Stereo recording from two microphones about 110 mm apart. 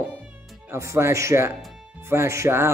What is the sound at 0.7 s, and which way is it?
Speech, 25° right (ahead or behind).